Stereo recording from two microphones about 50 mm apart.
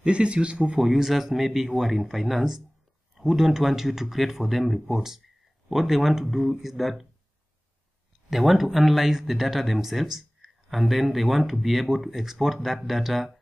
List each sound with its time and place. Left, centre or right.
0.0 s speech: right
0.7 s speech: centre
8.3 s speech: centre